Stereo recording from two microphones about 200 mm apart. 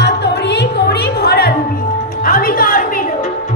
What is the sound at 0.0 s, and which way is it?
Music, 55° left (ahead or behind).